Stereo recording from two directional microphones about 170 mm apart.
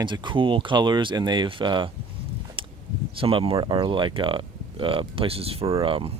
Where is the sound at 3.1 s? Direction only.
35° right (ahead or behind).